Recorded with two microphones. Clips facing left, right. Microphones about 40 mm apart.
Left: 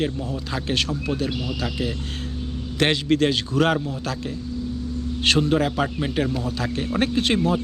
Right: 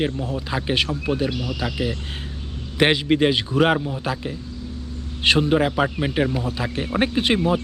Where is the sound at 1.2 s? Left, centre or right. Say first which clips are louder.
Right 1 dB; centre.